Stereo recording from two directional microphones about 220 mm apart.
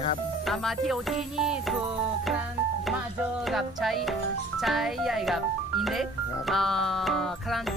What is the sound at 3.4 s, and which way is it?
Speech, centre (ahead or behind).